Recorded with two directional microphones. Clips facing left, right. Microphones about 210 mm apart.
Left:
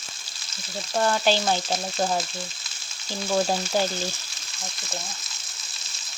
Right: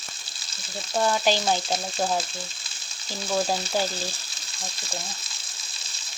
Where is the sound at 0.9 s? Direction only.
5° right (ahead or behind).